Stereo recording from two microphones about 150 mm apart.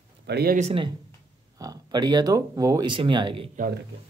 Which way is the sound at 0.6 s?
45° right (ahead or behind).